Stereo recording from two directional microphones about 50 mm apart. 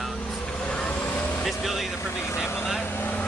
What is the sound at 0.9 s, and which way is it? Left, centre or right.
Vehicle, left.